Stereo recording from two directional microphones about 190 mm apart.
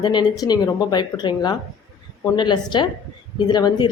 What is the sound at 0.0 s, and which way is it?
A woman's voice, 25° left (ahead or behind).